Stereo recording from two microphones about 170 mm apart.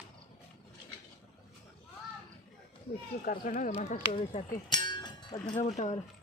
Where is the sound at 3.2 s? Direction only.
55° left (ahead or behind).